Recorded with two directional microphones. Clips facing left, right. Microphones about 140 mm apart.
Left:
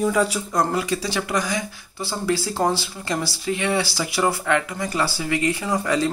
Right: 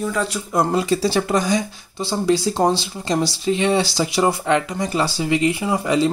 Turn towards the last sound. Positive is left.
turn(degrees=-15)  # may be behind; listen again after turning